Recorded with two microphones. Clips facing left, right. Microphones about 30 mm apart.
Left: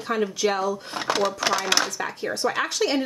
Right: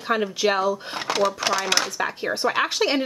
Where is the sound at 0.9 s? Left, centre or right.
Centre.